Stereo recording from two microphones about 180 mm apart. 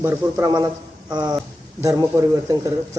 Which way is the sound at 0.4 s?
20° right (ahead or behind).